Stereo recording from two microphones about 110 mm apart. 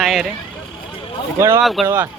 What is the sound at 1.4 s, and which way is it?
Speech, 25° right (ahead or behind).